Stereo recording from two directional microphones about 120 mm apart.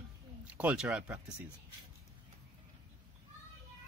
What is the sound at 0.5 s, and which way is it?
Speech, 10° right (ahead or behind).